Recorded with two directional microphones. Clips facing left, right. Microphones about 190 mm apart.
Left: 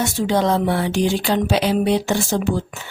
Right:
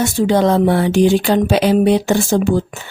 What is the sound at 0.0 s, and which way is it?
Speech, 50° right (ahead or behind).